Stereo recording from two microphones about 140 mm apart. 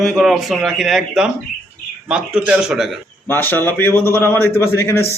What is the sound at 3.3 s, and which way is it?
A man's voice, 15° left (ahead or behind).